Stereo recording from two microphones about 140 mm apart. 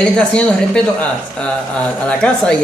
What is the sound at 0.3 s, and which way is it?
A man's voice, 5° left (ahead or behind).